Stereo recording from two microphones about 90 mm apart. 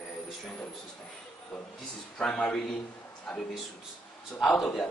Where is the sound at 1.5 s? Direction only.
5° left (ahead or behind).